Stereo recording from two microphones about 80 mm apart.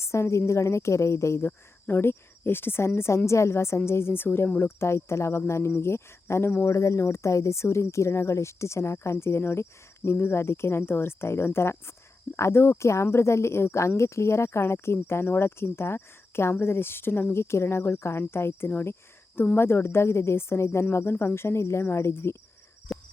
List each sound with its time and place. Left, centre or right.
0.0 s speech: left
6.7 s speech: left
22.9 s a sound: centre